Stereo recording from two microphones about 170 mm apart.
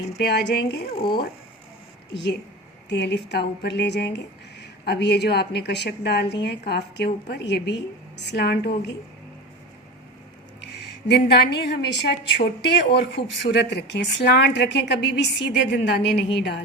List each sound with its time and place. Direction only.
0.2 s a woman's voice: 75° left (ahead or behind)
0.9 s speech: 30° left (ahead or behind)
2.1 s a woman's voice: 85° left
11.1 s a woman's voice: 75° left (ahead or behind)